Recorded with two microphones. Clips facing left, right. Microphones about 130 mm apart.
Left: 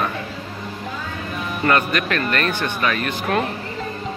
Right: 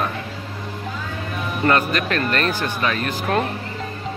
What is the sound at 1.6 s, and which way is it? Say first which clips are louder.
Speech: even; 30° right (ahead or behind).